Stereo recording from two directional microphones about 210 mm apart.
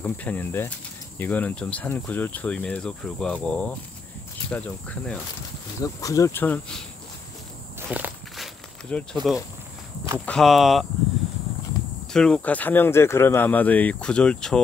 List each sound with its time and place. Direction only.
0.0 s speech: 5° left (ahead or behind)
7.9 s walk: 5° right (ahead or behind)
8.8 s speech: 5° left (ahead or behind)
12.1 s speech: 5° left (ahead or behind)